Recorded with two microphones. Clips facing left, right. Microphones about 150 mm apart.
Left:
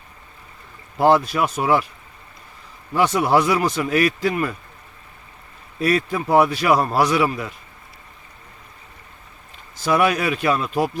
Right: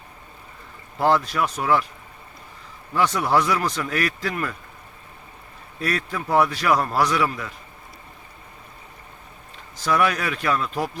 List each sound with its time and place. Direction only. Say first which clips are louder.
0.9 s speech: left 4 dB; 15° left (ahead or behind)
2.9 s speech: left 3 dB; 15° left (ahead or behind)
5.8 s speech: left 6 dB; 15° left (ahead or behind)
9.8 s speech: left 3 dB; 15° left (ahead or behind)